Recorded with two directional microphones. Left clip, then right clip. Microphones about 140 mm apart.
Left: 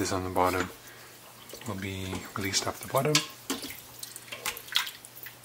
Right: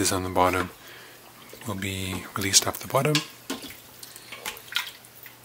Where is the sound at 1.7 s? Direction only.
25° right (ahead or behind).